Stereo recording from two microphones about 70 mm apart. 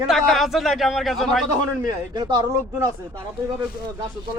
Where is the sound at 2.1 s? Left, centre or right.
Right.